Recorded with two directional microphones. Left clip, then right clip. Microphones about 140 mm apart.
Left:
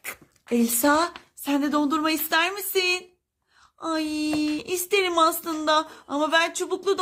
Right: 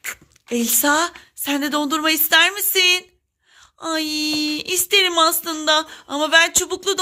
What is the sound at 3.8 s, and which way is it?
Speech, 5° right (ahead or behind).